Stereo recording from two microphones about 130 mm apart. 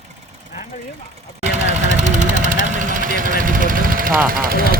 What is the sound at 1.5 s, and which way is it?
Vehicle, 65° right (ahead or behind).